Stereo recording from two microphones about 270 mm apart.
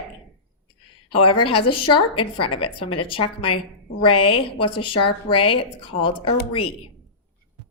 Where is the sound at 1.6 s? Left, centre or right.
Left.